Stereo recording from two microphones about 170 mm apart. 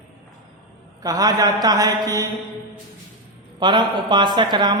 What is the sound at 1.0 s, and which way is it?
A man's voice, 20° right (ahead or behind).